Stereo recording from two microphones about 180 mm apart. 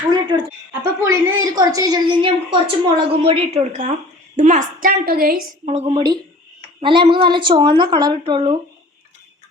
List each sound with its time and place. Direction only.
0.1 s a woman's voice: 25° right (ahead or behind); by 5.4 s 55° right (ahead or behind)
5.6 s a woman's voice: 35° right (ahead or behind)